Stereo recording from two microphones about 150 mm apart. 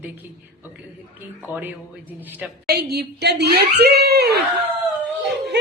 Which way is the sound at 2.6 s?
90° right.